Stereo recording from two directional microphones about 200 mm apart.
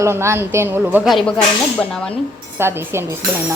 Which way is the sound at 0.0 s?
15° right (ahead or behind).